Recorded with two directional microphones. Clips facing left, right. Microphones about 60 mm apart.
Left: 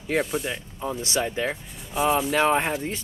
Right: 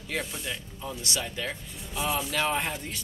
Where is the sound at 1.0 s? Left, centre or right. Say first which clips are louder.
Left 7 dB; left.